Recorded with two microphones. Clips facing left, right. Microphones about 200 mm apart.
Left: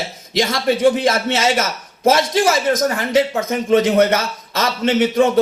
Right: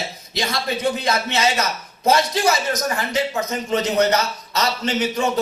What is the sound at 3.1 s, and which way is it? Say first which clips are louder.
A man's voice: left 6 dB; 50° left (ahead or behind).